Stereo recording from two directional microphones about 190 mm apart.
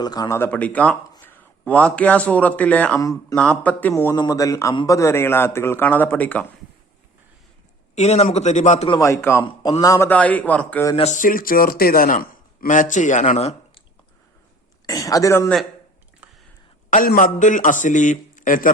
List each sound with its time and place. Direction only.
0.0 s a man's voice: 20° left (ahead or behind)
3.0 s a man's voice: 15° left (ahead or behind)
3.3 s a man's voice: 5° left (ahead or behind)
7.9 s a man's voice: 35° left (ahead or behind)
8.9 s a man's voice: 15° left (ahead or behind)
10.9 s a man's voice: 35° left (ahead or behind)
14.8 s a man's voice: 20° left (ahead or behind)
16.9 s a man's voice: 45° left (ahead or behind)